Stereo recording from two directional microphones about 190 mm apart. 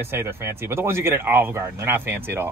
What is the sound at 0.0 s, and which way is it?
Speech, 10° right (ahead or behind).